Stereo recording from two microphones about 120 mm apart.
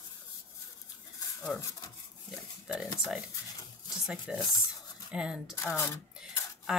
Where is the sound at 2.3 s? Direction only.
5° right (ahead or behind).